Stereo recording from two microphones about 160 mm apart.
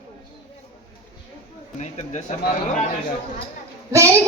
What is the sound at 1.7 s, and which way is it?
Speech, 45° left (ahead or behind).